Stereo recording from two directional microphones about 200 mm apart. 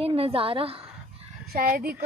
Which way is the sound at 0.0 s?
30° right (ahead or behind).